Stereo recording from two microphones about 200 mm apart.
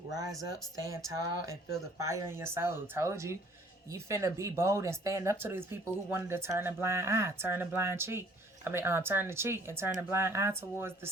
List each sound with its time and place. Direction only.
0.3 s speech: centre (ahead or behind)
0.9 s speech: 15° right (ahead or behind)